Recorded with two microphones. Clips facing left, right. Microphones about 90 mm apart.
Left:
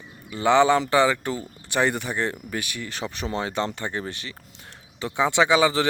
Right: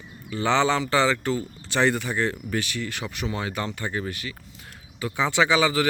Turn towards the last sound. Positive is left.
turn(degrees=25)  # may be behind; listen again after turning